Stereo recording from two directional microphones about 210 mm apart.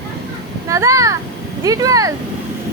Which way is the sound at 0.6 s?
15° right (ahead or behind).